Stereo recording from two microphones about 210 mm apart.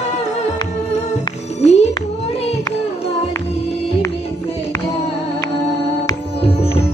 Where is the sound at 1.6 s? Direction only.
30° left (ahead or behind).